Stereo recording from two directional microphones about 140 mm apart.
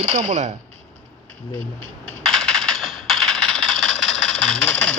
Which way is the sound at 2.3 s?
5° left (ahead or behind).